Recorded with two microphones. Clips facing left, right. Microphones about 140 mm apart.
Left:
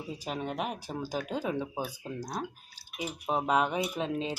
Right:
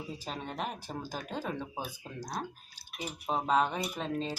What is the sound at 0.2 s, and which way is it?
Speech, 10° left (ahead or behind).